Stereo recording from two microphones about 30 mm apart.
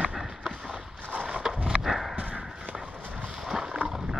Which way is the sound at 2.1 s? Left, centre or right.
Right.